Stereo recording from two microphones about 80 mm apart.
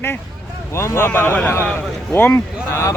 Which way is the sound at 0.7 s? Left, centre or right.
Left.